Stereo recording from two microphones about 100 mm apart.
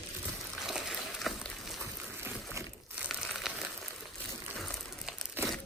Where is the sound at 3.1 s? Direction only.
Centre (ahead or behind).